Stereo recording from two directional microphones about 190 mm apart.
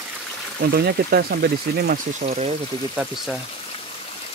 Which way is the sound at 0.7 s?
55° right (ahead or behind).